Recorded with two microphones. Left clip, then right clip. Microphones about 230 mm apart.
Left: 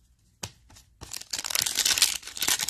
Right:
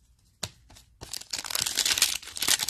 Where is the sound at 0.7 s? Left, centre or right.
Centre.